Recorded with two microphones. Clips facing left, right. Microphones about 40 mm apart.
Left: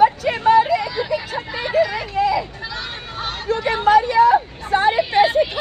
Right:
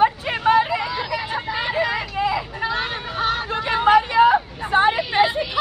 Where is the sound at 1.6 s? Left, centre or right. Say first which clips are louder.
Left 5 dB; right.